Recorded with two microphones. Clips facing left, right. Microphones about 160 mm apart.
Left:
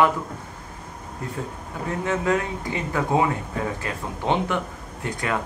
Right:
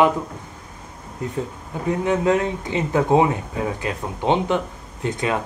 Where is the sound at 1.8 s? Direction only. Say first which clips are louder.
Right 5 dB; 20° right (ahead or behind).